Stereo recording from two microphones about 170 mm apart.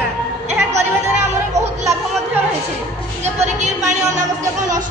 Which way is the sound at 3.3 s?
45° right (ahead or behind).